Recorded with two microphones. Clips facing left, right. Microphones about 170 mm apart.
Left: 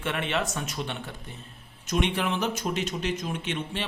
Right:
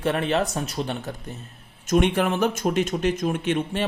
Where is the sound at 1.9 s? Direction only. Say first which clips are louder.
Right 6 dB; 50° right (ahead or behind).